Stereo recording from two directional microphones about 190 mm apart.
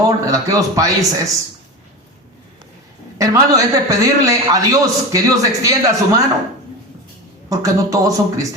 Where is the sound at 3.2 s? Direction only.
20° right (ahead or behind).